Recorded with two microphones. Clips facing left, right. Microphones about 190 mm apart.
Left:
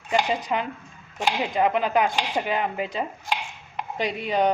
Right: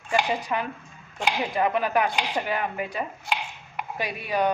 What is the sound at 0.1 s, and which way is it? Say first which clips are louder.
Chopping: left 1 dB; 20° left (ahead or behind).